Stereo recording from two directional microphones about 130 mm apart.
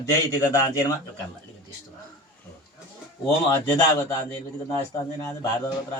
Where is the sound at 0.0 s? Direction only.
25° left (ahead or behind).